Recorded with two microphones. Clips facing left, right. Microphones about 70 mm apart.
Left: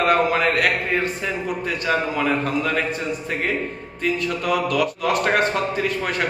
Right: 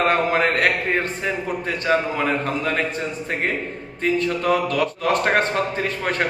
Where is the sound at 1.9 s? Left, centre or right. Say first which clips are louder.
Right 2 dB; right.